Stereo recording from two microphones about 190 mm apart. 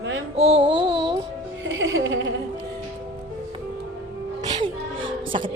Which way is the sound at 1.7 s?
75° right (ahead or behind).